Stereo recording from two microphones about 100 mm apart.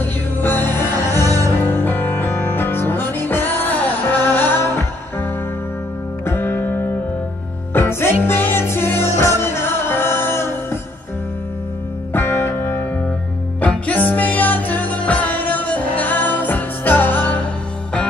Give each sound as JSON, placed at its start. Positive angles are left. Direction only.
{"t": 0.0, "sound": "music", "side_deg": 20}
{"t": 1.1, "sound": "music", "side_deg": -35}
{"t": 1.6, "sound": "music", "side_deg": 20}
{"t": 6.2, "sound": "music", "side_deg": 25}
{"t": 12.1, "sound": "music", "side_deg": 25}